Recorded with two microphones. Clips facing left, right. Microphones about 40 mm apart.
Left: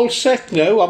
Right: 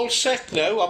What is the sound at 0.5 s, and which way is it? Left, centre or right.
Speech, left.